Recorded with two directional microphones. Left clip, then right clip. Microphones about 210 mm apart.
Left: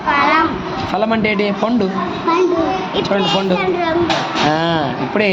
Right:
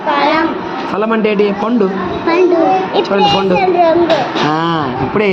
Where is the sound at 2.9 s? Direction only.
15° left (ahead or behind).